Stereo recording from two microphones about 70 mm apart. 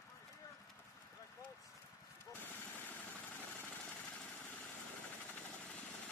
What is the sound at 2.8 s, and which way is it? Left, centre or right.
Vehicle, left.